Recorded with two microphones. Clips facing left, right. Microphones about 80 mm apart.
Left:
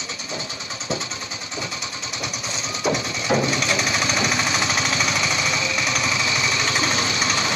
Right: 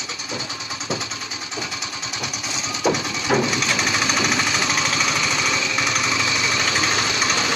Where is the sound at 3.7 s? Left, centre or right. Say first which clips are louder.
Right 1 dB; right.